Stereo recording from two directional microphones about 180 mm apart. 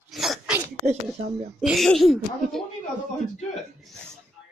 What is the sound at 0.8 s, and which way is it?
Speech, 35° right (ahead or behind).